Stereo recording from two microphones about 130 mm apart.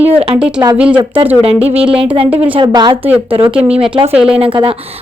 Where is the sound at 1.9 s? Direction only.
45° right (ahead or behind).